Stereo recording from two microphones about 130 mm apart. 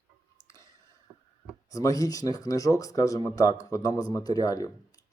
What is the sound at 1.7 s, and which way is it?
Speech, 25° left (ahead or behind).